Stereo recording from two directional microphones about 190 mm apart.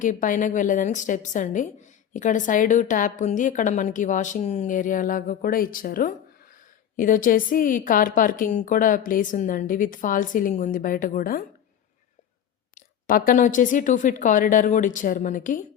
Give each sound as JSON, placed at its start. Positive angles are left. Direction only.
{"t": 0.0, "sound": "a woman's voice", "side_deg": 45}
{"t": 13.1, "sound": "a woman's voice", "side_deg": 50}